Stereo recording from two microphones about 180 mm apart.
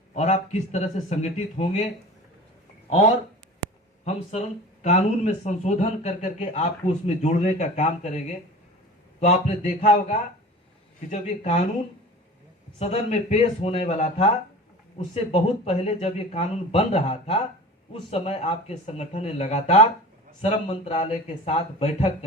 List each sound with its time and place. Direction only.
0.1 s speech: 45° left (ahead or behind)
4.0 s speech: 35° left (ahead or behind)
9.2 s speech: 40° left (ahead or behind)
12.8 s speech: 35° left (ahead or behind)